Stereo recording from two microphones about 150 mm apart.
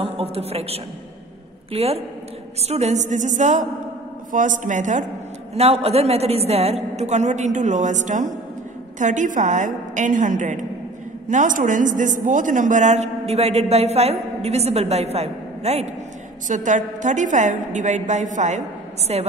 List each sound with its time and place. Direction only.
0.0 s a woman's voice: 40° right (ahead or behind)
5.5 s a woman's voice: 45° right (ahead or behind)
16.4 s a woman's voice: 55° right (ahead or behind)
19.1 s a woman's voice: 45° right (ahead or behind)